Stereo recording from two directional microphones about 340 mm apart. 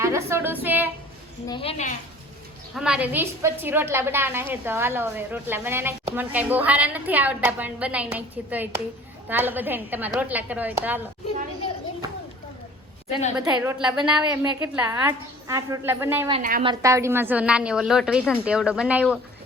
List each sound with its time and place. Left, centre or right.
0.0 s a woman's voice: centre
1.5 s a woman's voice: centre
2.7 s a woman's voice: centre
13.6 s a woman's voice: centre
16.3 s a woman's voice: right
16.8 s a woman's voice: centre